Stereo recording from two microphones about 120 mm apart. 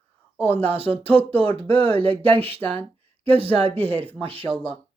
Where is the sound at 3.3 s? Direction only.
50° right (ahead or behind).